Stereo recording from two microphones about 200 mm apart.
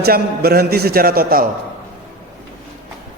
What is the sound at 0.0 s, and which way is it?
A woman's voice, 50° right (ahead or behind).